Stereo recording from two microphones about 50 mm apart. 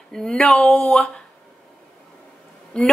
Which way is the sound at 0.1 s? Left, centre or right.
Centre.